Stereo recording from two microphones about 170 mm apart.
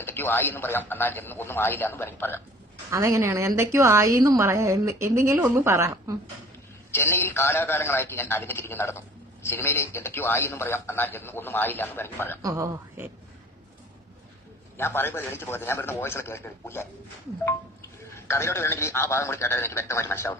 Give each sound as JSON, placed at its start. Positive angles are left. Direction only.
{"t": 0.0, "sound": "a man's voice", "side_deg": 10}
{"t": 2.9, "sound": "a woman's voice", "side_deg": -15}
{"t": 6.9, "sound": "a man's voice", "side_deg": 15}
{"t": 12.4, "sound": "a woman's voice", "side_deg": -20}
{"t": 14.8, "sound": "a man's voice", "side_deg": 15}
{"t": 18.1, "sound": "a man's voice", "side_deg": 15}